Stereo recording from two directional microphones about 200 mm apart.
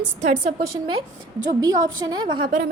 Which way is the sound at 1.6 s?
20° right (ahead or behind).